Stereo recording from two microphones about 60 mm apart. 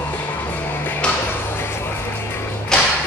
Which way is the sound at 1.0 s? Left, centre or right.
Centre.